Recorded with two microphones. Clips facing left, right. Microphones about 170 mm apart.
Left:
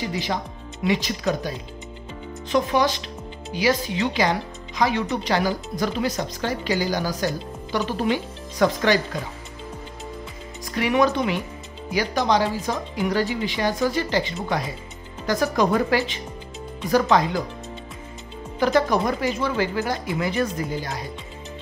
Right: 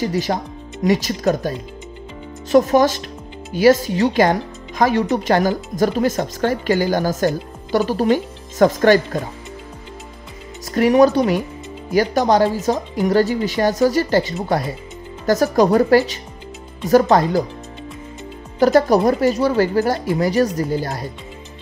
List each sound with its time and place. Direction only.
0.0 s speech: 45° right (ahead or behind)
2.5 s speech: 45° right (ahead or behind)
10.6 s speech: 45° right (ahead or behind)
18.6 s speech: 40° right (ahead or behind)